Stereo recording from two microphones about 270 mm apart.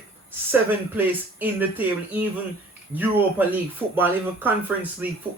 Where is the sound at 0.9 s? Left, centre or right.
Centre.